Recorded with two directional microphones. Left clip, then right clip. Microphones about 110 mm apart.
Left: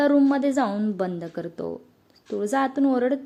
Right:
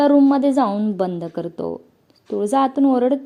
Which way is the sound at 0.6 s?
Centre (ahead or behind).